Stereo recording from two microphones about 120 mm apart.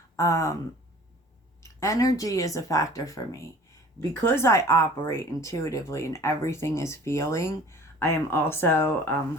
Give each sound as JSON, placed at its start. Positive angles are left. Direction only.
{"t": 0.2, "sound": "speech", "side_deg": 25}
{"t": 1.6, "sound": "speech", "side_deg": 25}